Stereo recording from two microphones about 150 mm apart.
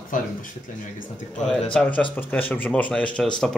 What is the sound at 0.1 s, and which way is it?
Speech, 60° left (ahead or behind).